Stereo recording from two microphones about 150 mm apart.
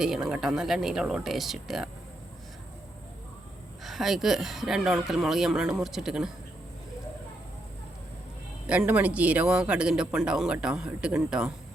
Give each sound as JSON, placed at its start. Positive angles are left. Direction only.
{"t": 0.0, "sound": "speech", "side_deg": -5}
{"t": 3.8, "sound": "speech", "side_deg": 0}
{"t": 8.6, "sound": "speech", "side_deg": -10}